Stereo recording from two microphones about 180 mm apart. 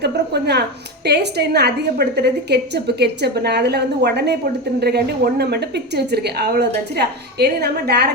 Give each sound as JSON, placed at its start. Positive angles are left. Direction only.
{"t": 0.0, "sound": "a woman's voice", "side_deg": -65}